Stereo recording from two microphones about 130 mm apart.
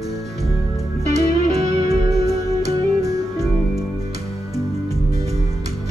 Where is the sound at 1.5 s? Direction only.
25° right (ahead or behind).